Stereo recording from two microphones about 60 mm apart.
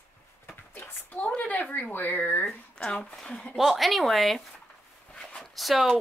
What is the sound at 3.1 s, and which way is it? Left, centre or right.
Speech, centre.